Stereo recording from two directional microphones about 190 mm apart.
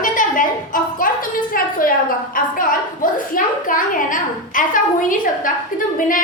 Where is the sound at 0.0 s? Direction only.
45° left (ahead or behind).